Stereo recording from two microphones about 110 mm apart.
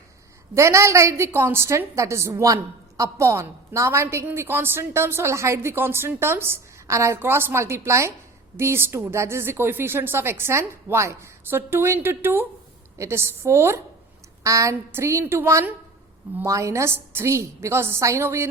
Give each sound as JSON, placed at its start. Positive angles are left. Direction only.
{"t": 0.5, "sound": "speech", "side_deg": -25}